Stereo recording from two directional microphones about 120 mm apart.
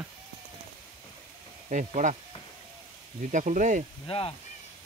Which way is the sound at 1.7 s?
90° right.